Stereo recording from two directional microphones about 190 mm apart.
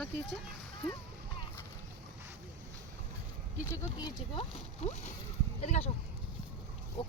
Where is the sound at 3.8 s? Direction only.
20° left (ahead or behind).